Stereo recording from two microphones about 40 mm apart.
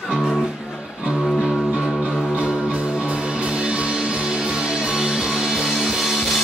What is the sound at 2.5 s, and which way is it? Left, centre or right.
Music, right.